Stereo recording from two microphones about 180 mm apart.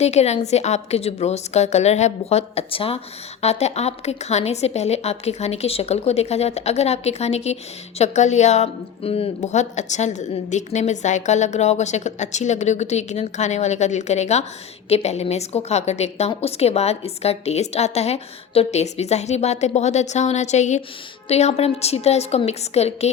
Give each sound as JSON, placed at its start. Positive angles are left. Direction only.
{"t": 0.0, "sound": "a woman's voice", "side_deg": 35}